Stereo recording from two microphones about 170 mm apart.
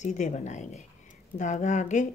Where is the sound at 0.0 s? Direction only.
45° left (ahead or behind).